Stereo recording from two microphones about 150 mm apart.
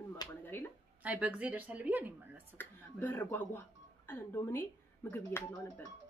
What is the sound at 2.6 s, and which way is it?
Speech, 15° left (ahead or behind).